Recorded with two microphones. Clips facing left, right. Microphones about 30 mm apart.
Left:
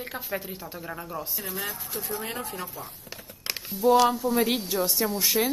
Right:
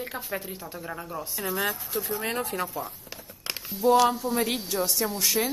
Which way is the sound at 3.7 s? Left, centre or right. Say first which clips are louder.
Even; centre.